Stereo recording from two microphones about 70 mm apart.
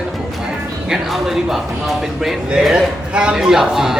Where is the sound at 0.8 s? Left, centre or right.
Centre.